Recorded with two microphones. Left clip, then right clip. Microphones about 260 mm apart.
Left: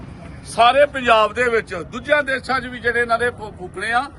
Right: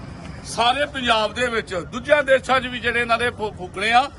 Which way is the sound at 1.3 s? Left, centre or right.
Centre.